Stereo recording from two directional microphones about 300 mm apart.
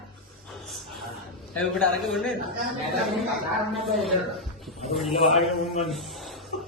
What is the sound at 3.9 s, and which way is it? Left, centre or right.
Speech, centre.